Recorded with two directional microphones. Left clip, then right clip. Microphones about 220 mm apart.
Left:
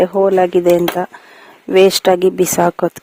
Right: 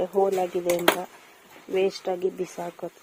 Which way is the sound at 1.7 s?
50° left (ahead or behind).